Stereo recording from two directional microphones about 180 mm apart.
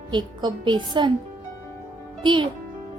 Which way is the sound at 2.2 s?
25° right (ahead or behind).